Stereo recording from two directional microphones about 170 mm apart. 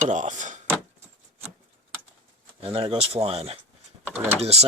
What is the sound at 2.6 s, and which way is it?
Speech, 30° right (ahead or behind).